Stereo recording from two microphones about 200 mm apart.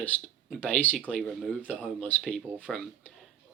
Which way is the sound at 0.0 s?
5° left (ahead or behind).